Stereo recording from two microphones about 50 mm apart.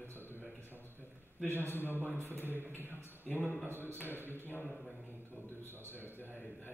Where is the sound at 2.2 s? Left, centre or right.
Left.